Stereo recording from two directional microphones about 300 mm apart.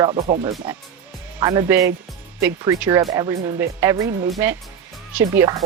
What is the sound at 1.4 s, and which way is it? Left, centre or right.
Speech, centre.